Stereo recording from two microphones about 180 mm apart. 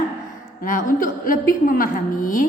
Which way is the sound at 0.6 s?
50° left (ahead or behind).